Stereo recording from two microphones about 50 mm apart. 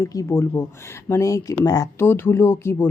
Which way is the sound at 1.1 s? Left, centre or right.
Left.